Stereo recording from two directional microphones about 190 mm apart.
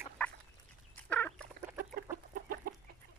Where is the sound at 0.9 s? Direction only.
5° left (ahead or behind).